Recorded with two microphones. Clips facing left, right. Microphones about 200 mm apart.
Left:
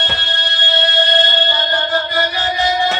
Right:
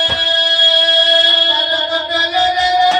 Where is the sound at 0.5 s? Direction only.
15° right (ahead or behind).